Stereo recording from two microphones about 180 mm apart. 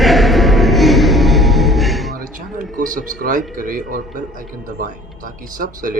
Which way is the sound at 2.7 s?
50° right (ahead or behind).